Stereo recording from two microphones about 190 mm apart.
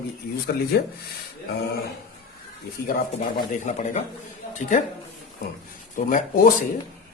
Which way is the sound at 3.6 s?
40° left (ahead or behind).